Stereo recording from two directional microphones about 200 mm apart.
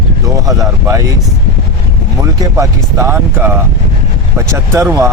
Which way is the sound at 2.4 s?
15° right (ahead or behind).